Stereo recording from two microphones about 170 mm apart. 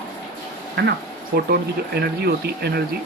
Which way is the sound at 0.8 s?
80° right.